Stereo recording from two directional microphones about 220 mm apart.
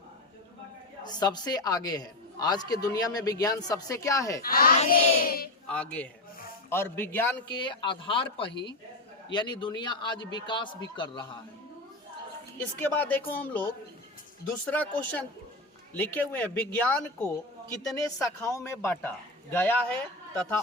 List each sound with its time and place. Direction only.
1.0 s a man's voice: 20° left (ahead or behind)
4.4 s speech: 40° left (ahead or behind)
5.6 s a man's voice: 5° left (ahead or behind)
7.5 s a man's voice: 20° left (ahead or behind)
12.5 s a man's voice: 10° left (ahead or behind)
18.3 s a man's voice: 15° left (ahead or behind)